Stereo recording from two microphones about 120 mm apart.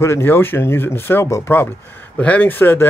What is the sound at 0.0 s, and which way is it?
Speech, 20° left (ahead or behind).